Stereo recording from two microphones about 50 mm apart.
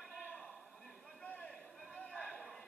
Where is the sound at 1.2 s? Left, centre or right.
Left; by 2.6 s centre.